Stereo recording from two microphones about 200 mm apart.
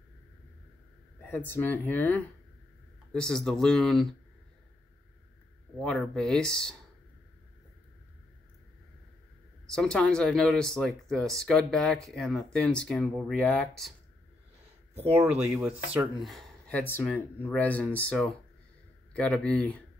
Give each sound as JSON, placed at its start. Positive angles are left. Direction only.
{"t": 1.3, "sound": "speech", "side_deg": 10}
{"t": 5.8, "sound": "speech", "side_deg": 5}
{"t": 9.7, "sound": "speech", "side_deg": 5}
{"t": 15.5, "sound": "speech", "side_deg": -10}